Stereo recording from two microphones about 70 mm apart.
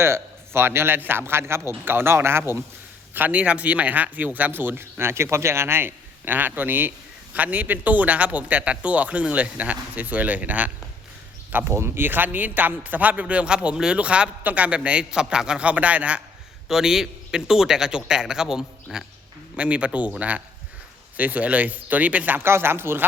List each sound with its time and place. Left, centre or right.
0.0 s a man's voice: right
3.2 s a man's voice: right
11.5 s a man's voice: right; by 16.2 s centre
16.6 s a man's voice: centre
19.5 s a man's voice: centre; by 23.0 s right